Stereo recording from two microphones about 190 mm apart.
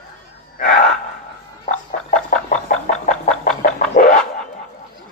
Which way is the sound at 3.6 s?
40° left (ahead or behind).